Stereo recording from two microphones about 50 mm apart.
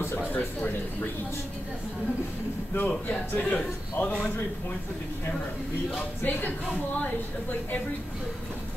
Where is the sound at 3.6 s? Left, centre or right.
Left.